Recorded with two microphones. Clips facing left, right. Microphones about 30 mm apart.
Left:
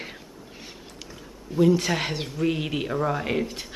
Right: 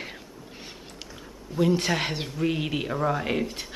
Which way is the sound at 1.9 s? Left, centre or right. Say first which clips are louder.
Even; centre.